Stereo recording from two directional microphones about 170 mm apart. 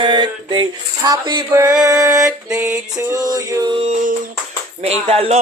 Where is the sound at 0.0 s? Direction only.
30° right (ahead or behind).